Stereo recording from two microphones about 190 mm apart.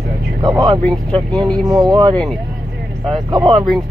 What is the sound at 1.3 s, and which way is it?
Speech, 5° left (ahead or behind).